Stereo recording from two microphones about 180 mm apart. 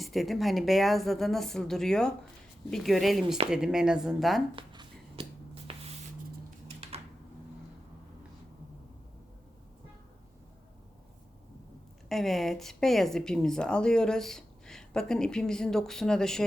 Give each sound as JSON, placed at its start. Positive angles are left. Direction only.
{"t": 0.0, "sound": "speech", "side_deg": 0}
{"t": 4.5, "sound": "a sound", "side_deg": -25}
{"t": 12.0, "sound": "speech", "side_deg": 0}